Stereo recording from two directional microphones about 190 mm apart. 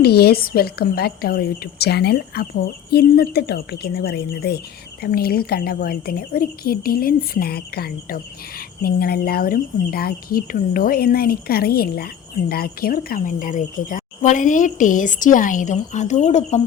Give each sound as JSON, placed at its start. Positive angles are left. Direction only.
{"t": 0.0, "sound": "a woman's voice", "side_deg": 55}